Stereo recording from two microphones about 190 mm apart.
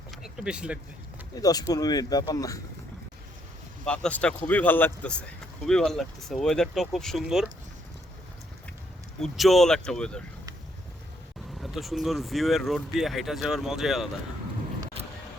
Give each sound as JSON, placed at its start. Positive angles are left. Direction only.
{"t": 0.2, "sound": "speech", "side_deg": -5}
{"t": 1.4, "sound": "speech", "side_deg": 20}
{"t": 3.8, "sound": "speech", "side_deg": 5}
{"t": 9.2, "sound": "speech", "side_deg": 0}
{"t": 11.6, "sound": "speech", "side_deg": 0}